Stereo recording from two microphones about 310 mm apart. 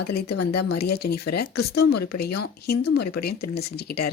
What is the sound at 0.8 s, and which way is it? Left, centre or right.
Speech, left.